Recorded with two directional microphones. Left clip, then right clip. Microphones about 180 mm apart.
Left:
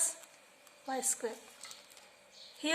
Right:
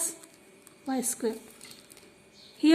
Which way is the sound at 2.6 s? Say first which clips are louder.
Right 11 dB; 30° right (ahead or behind).